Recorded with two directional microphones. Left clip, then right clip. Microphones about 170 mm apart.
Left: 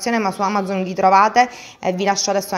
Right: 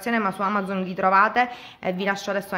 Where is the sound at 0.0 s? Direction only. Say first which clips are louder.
Left 4 dB; 15° left (ahead or behind).